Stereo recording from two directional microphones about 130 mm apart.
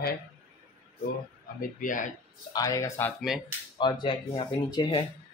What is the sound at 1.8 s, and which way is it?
Speech, 90° left.